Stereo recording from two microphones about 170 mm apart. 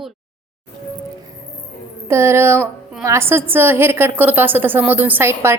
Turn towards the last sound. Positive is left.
turn(degrees=-15)  # may be behind; listen again after turning